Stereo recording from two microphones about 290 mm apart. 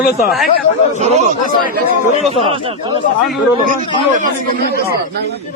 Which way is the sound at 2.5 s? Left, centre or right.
Centre.